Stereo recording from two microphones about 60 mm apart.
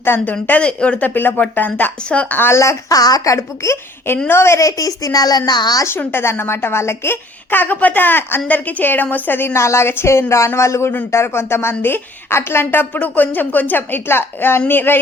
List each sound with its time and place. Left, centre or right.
0.3 s speech: left
2.5 s a woman's voice: left
2.9 s a woman's voice: left
4.6 s speech: left
6.0 s a woman's voice: left
9.5 s a woman's voice: left